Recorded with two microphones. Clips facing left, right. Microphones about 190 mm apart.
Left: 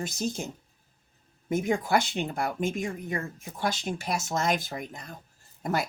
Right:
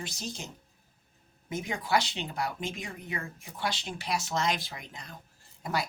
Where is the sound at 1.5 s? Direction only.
50° left (ahead or behind).